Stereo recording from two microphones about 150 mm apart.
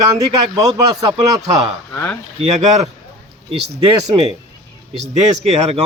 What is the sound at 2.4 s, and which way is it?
Speech, 45° right (ahead or behind).